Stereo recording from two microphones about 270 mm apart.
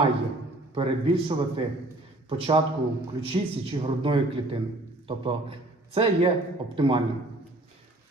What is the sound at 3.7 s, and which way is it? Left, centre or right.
A man's voice, centre.